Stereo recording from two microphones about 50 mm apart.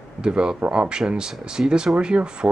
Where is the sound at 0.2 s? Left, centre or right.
Centre.